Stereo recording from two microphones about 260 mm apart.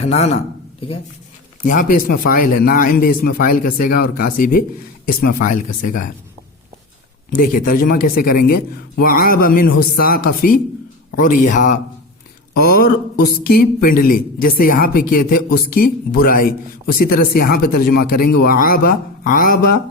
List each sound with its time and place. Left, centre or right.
0.0 s speech: left
7.3 s speech: left